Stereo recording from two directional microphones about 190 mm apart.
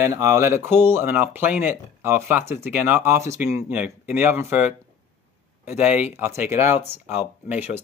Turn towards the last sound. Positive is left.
turn(degrees=-10)  # may be behind; listen again after turning